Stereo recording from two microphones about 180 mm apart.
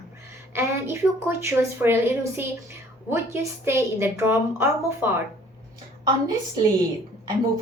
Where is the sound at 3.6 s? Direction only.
15° right (ahead or behind).